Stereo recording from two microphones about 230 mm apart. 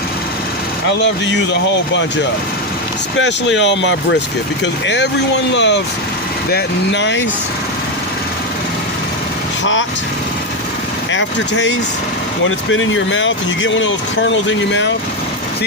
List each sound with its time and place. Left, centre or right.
3.2 s speech: left
11.1 s speech: left